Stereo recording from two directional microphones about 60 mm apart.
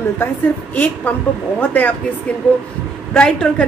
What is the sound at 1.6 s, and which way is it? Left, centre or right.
Speech, left.